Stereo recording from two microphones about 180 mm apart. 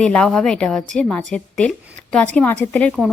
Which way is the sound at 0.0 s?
5° left (ahead or behind).